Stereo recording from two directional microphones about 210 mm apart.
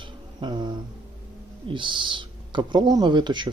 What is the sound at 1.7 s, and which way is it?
Speech, 25° right (ahead or behind).